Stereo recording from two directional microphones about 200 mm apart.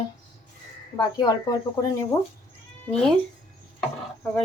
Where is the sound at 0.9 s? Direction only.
20° left (ahead or behind).